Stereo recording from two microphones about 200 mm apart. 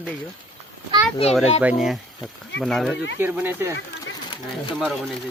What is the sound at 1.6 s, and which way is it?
Speech, centre (ahead or behind).